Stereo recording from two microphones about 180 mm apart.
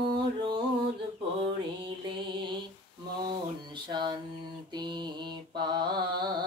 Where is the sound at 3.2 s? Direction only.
25° right (ahead or behind).